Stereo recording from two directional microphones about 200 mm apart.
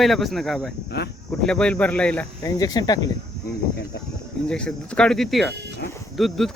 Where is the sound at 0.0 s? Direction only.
Centre (ahead or behind).